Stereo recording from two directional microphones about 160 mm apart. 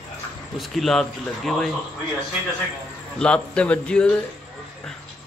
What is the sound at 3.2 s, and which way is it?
Speech, 5° left (ahead or behind).